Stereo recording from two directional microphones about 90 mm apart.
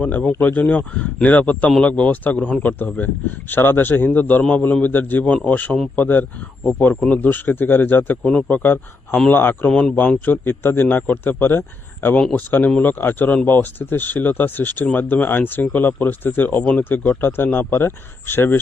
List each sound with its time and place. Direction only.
0.0 s a man's voice: 15° left (ahead or behind)